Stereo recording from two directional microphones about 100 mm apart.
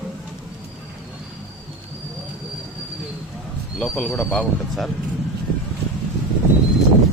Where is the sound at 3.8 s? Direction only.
5° left (ahead or behind).